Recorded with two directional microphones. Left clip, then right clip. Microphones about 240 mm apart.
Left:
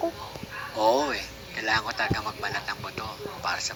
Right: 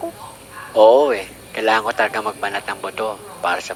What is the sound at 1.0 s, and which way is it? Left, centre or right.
Speech, right.